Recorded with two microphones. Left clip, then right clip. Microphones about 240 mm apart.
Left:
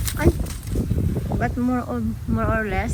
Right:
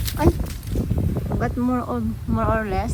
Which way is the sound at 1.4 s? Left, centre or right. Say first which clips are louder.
Even; centre.